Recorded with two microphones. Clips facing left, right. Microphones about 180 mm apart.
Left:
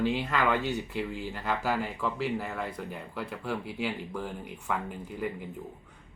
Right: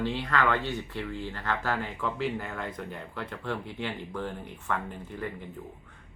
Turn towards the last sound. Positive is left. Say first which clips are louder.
# left 2 dB
turn(degrees=10)  # may be behind; listen again after turning